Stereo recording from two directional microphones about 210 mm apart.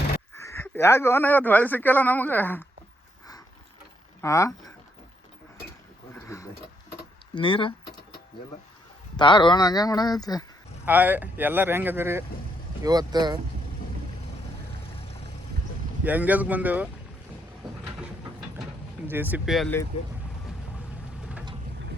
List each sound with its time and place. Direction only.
0.4 s speech: 10° left (ahead or behind)
4.2 s speech: 15° left (ahead or behind)
6.1 s a sound: 15° left (ahead or behind)
7.3 s speech: 25° left (ahead or behind)
9.1 s speech: 20° left (ahead or behind)
10.8 s speech: 10° right (ahead or behind)
16.0 s speech: 10° right (ahead or behind)
19.0 s speech: 10° right (ahead or behind)
19.9 s speech: 30° left (ahead or behind)